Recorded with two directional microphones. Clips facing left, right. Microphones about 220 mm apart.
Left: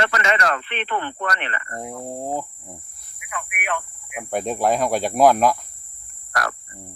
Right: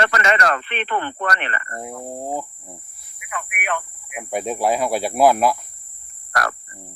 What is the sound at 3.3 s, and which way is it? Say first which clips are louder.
Speech: right 1 dB; 55° right (ahead or behind).